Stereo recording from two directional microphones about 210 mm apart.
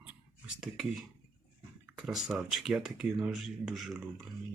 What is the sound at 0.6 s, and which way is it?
Speech, centre (ahead or behind).